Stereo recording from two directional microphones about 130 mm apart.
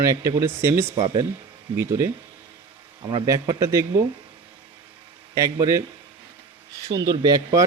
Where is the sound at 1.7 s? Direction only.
20° right (ahead or behind).